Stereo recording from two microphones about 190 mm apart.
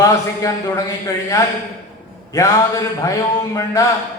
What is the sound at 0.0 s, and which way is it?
A man's voice, 15° left (ahead or behind).